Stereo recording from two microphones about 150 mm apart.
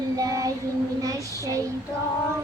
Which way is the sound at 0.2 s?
25° right (ahead or behind).